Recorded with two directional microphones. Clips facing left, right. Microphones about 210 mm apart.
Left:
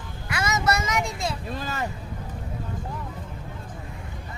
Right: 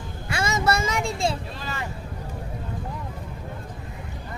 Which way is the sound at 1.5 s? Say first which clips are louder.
Left 3 dB; 45° left (ahead or behind).